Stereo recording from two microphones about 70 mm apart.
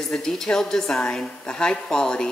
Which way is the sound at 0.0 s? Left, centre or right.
Centre.